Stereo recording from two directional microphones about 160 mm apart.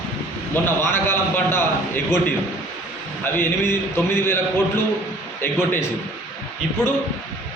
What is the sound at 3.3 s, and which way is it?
A man's voice, 15° left (ahead or behind).